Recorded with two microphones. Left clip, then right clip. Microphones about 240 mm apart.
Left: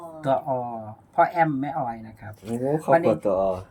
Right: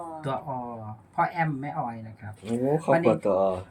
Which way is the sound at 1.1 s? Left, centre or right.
Left.